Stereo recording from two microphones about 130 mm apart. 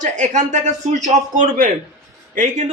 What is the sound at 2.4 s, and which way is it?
Speech, 65° right (ahead or behind).